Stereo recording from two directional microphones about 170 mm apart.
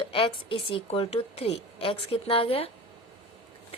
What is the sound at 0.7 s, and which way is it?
A woman's voice, 35° left (ahead or behind).